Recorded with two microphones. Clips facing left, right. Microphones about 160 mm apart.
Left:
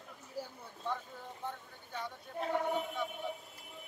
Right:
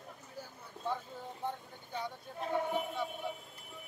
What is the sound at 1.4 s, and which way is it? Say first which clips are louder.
Speech: right 4 dB; 10° right (ahead or behind).